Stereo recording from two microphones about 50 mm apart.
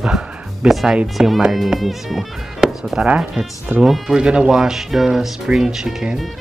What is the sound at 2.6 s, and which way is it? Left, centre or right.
Music, centre.